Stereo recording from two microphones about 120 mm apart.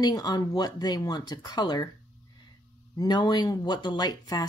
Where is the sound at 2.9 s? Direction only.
35° left (ahead or behind).